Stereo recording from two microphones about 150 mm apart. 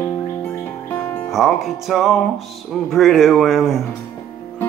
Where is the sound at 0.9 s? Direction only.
15° left (ahead or behind).